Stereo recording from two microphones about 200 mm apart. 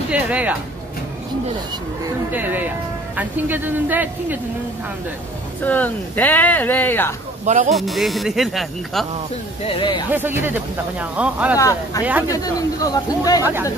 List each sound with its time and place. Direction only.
0.1 s speech: 5° right (ahead or behind)
2.3 s speech: 10° right (ahead or behind)
5.6 s speech: 10° left (ahead or behind)
7.4 s speech: 35° right (ahead or behind)
7.7 s speech: centre (ahead or behind)
9.7 s speech: 25° left (ahead or behind)
10.1 s speech: 10° right (ahead or behind)
11.5 s speech: 15° left (ahead or behind)
12.0 s speech: 10° right (ahead or behind)
12.3 s speech: 15° left (ahead or behind)
13.4 s speech: 10° right (ahead or behind)